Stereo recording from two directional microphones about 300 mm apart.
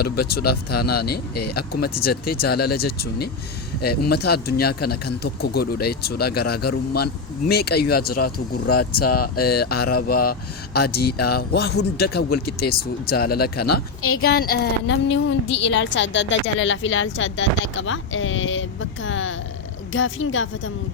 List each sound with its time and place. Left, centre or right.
0.0 s a woman's voice: left
9.0 s speech: left
9.5 s a woman's voice: left
11.0 s speech: left
11.3 s a woman's voice: left